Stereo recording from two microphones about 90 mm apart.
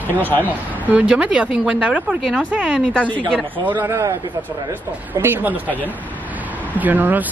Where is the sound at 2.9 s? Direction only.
15° left (ahead or behind).